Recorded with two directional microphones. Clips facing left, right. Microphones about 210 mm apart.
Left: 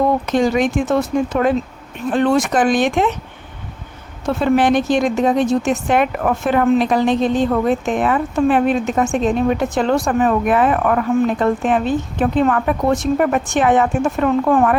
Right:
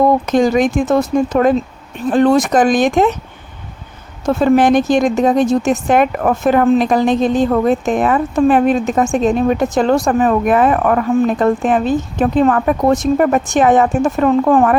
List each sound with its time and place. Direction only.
0.3 s speech: 45° right (ahead or behind)
4.3 s speech: 45° right (ahead or behind)